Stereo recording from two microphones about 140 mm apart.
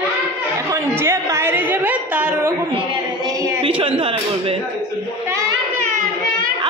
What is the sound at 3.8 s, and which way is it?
Speech, 40° right (ahead or behind).